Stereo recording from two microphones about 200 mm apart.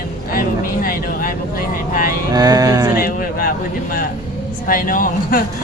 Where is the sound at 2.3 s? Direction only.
20° right (ahead or behind).